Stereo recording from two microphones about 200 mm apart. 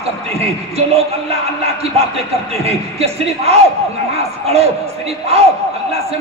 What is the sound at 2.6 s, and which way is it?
Speech, 30° right (ahead or behind).